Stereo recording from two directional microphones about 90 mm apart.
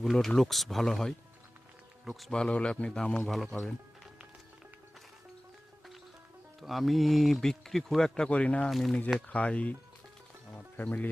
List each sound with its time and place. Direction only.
0.0 s speech: 5° left (ahead or behind)
2.3 s a man's voice: 10° left (ahead or behind)
3.2 s speech: centre (ahead or behind)
3.6 s music: 5° right (ahead or behind)
6.6 s speech: centre (ahead or behind)
8.7 s speech: centre (ahead or behind)
9.1 s a man's voice: 15° left (ahead or behind)
10.8 s speech: 20° left (ahead or behind)